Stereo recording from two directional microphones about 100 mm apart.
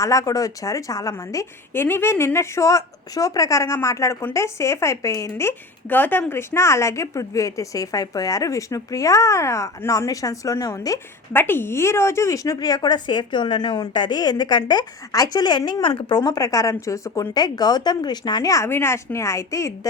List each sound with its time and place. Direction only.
0.0 s speech: 35° left (ahead or behind)
1.7 s speech: 25° left (ahead or behind)
11.3 s speech: 20° left (ahead or behind)